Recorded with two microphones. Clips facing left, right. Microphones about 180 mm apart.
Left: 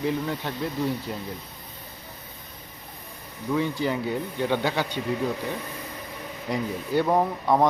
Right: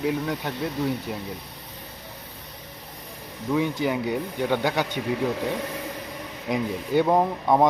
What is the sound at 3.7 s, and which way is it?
Speech, 10° right (ahead or behind).